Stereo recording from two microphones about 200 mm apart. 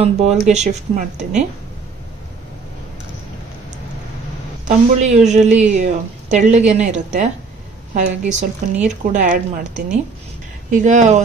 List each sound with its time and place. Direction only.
0.0 s a woman's voice: 30° right (ahead or behind)
4.6 s a woman's voice: 35° right (ahead or behind)